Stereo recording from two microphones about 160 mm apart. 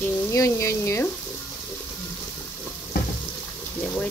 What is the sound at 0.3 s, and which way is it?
Frying, 20° left (ahead or behind).